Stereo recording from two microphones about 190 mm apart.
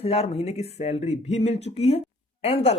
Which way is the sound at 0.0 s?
35° left (ahead or behind).